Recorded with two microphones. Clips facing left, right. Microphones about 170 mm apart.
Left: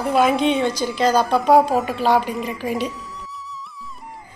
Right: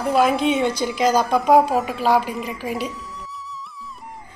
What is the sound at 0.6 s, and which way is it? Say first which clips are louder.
A woman's voice: even; 15° right (ahead or behind).